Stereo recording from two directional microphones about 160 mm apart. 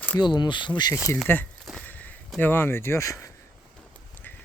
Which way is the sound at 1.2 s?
10° left (ahead or behind).